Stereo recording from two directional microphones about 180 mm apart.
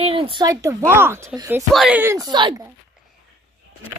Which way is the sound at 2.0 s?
15° right (ahead or behind).